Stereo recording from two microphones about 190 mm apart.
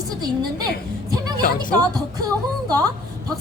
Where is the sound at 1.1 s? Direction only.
20° right (ahead or behind).